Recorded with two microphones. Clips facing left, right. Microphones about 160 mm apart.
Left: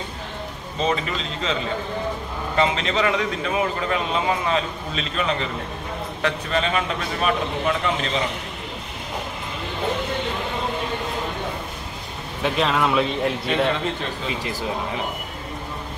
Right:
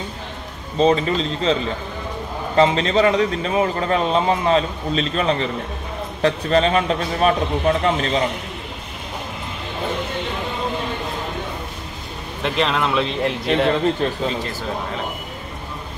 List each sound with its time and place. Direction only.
0.7 s a man's voice: 35° right (ahead or behind)
12.4 s speech: centre (ahead or behind)